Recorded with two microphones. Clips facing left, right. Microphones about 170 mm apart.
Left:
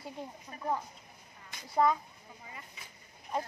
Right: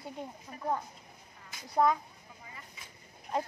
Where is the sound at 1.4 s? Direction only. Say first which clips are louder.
Right 1 dB; centre (ahead or behind).